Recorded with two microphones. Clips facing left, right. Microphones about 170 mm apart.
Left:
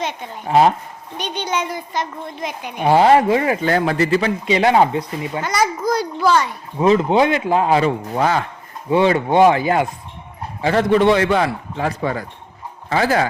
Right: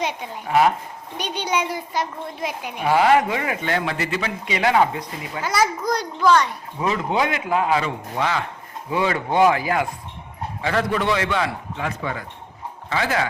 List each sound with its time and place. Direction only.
0.0 s a woman's voice: 10° right (ahead or behind)
0.4 s speech: 30° left (ahead or behind)
1.2 s a woman's voice: 10° right (ahead or behind)
2.8 s speech: 30° left (ahead or behind)
5.4 s a child's voice: 5° right (ahead or behind)
6.7 s speech: 30° left (ahead or behind)
8.9 s speech: 25° left (ahead or behind)